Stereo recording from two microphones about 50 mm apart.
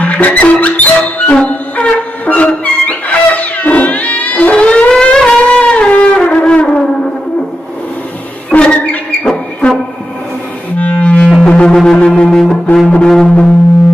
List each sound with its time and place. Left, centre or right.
0.0 s music: left
8.5 s music: left
11.7 s music: centre